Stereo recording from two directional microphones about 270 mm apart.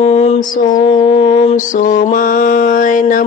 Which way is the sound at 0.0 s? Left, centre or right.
Left.